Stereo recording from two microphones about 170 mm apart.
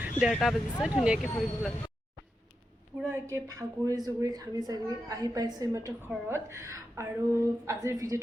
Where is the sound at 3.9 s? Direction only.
20° right (ahead or behind).